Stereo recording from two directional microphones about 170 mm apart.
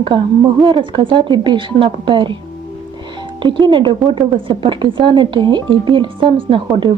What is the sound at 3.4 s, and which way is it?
A woman's voice, 25° right (ahead or behind).